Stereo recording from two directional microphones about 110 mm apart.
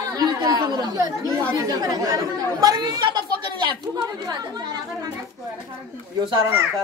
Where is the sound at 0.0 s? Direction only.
35° right (ahead or behind).